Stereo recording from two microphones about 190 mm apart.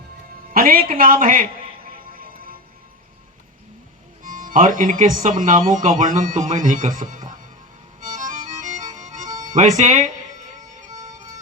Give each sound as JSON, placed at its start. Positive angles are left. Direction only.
{"t": 0.5, "sound": "speech", "side_deg": -50}
{"t": 4.2, "sound": "speech", "side_deg": -45}
{"t": 8.0, "sound": "music", "side_deg": -40}
{"t": 9.6, "sound": "speech", "side_deg": -40}
{"t": 10.8, "sound": "music", "side_deg": -15}